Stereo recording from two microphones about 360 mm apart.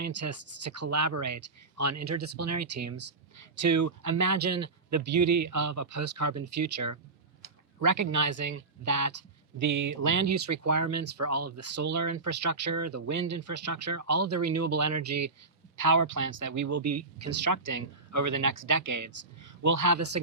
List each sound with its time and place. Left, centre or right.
0.0 s speech: right
3.7 s speech: right
15.8 s speech: right